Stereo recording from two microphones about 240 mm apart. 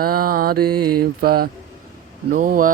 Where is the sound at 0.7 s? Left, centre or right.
Right.